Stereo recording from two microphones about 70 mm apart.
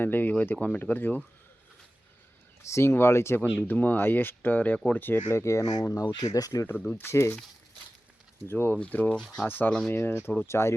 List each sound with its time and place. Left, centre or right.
0.0 s speech: left
2.6 s speech: left
3.4 s speech: centre
3.7 s speech: left
5.3 s speech: left
6.0 s speech: left
6.7 s speech: left
8.4 s speech: left